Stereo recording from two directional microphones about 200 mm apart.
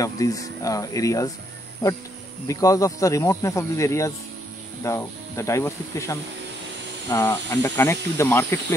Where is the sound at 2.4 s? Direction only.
15° left (ahead or behind).